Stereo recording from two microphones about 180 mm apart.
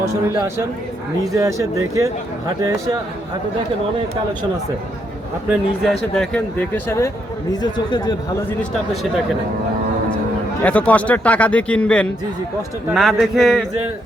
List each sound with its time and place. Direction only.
1.2 s a man's voice: 15° right (ahead or behind)
5.5 s speech: centre (ahead or behind)
7.6 s speech: 25° left (ahead or behind)
10.6 s a man's voice: 10° left (ahead or behind)